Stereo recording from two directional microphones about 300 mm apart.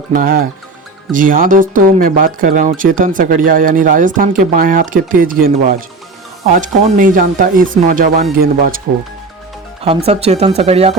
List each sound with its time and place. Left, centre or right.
0.2 s speech: right
9.8 s speech: centre